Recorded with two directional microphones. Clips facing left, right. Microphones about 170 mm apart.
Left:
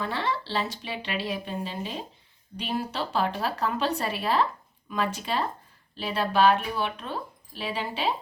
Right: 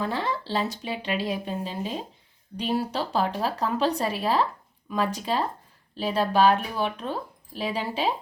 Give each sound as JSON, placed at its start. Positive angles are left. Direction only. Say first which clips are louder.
{"t": 0.0, "sound": "speech", "louder": "right 1 dB", "side_deg": -40}